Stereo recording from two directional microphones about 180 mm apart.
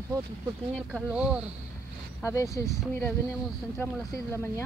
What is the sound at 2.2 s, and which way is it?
Speech, 15° left (ahead or behind).